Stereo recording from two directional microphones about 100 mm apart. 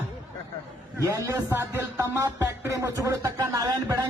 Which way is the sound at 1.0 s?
35° right (ahead or behind).